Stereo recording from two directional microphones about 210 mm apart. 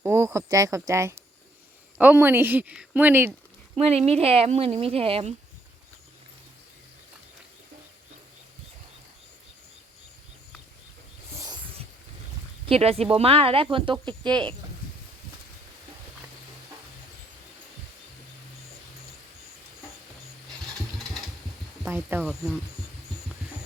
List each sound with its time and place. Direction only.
0.0 s a woman's voice: 10° right (ahead or behind)
3.8 s speech: 30° right (ahead or behind)
12.6 s speech: 30° right (ahead or behind)
21.8 s speech: 10° right (ahead or behind)